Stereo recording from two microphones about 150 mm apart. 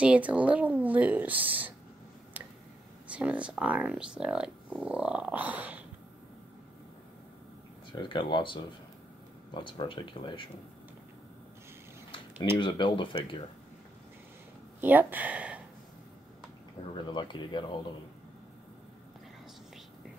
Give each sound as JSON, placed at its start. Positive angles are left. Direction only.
{"t": 0.0, "sound": "speech", "side_deg": -10}
{"t": 3.1, "sound": "speech", "side_deg": -10}
{"t": 7.9, "sound": "speech", "side_deg": 30}
{"t": 12.5, "sound": "speech", "side_deg": 35}
{"t": 14.8, "sound": "speech", "side_deg": -10}
{"t": 16.9, "sound": "speech", "side_deg": 30}